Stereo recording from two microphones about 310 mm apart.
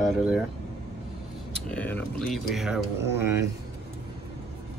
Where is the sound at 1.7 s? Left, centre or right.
Centre.